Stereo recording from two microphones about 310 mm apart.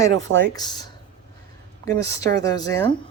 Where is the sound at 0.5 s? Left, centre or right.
Centre.